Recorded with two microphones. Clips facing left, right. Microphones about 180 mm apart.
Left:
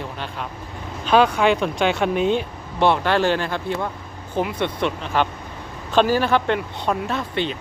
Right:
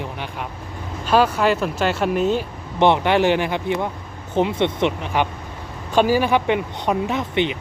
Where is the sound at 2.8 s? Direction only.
20° right (ahead or behind).